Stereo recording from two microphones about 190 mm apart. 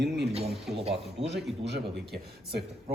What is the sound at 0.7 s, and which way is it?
Speech, 30° right (ahead or behind).